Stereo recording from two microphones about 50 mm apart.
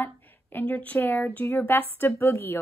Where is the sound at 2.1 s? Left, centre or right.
Left.